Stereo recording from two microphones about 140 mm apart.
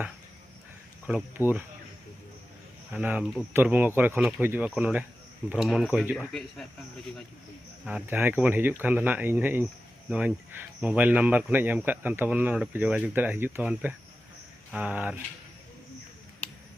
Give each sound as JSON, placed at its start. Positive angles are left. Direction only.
{"t": 1.4, "sound": "speech", "side_deg": 20}
{"t": 2.9, "sound": "speech", "side_deg": -10}
{"t": 5.6, "sound": "speech", "side_deg": 5}
{"t": 7.9, "sound": "speech", "side_deg": -10}